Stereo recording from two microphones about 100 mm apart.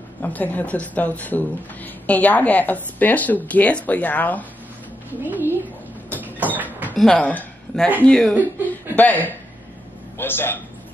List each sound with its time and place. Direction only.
0.2 s a woman's voice: 15° left (ahead or behind)
5.2 s a woman's voice: 20° right (ahead or behind)
6.2 s a sound: 15° right (ahead or behind)
7.0 s a woman's voice: 10° left (ahead or behind)